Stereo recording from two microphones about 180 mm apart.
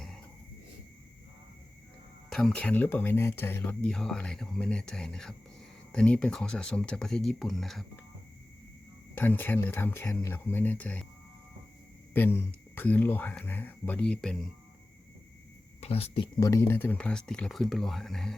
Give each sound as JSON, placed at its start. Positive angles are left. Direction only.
{"t": 2.3, "sound": "speech", "side_deg": 5}
{"t": 9.1, "sound": "speech", "side_deg": 10}
{"t": 12.1, "sound": "speech", "side_deg": 10}
{"t": 15.8, "sound": "speech", "side_deg": 35}
{"t": 16.5, "sound": "speech", "side_deg": 15}